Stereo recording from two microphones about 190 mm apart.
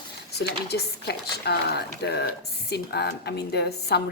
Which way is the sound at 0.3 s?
60° left (ahead or behind).